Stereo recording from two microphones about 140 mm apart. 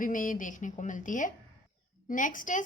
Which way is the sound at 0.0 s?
75° left (ahead or behind).